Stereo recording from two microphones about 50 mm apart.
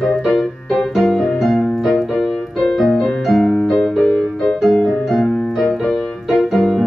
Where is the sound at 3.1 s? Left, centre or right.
Centre.